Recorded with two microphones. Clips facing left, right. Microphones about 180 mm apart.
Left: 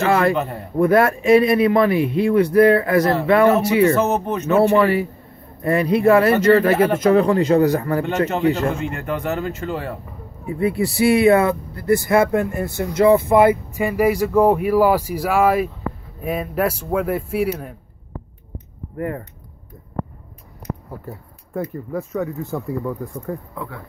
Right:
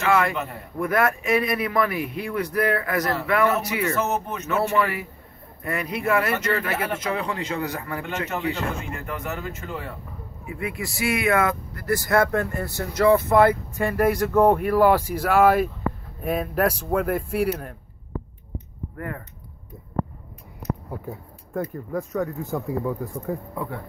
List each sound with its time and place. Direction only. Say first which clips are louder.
0.0 s a man's voice: left 5 dB; 35° left (ahead or behind)
8.9 s speech: left 7 dB; 70° left (ahead or behind)
10.4 s speech: left 11 dB; 35° left (ahead or behind); by 17.7 s centre (ahead or behind)
18.9 s a man's voice: left 8 dB; 30° left (ahead or behind)
21.0 s speech: even; centre (ahead or behind)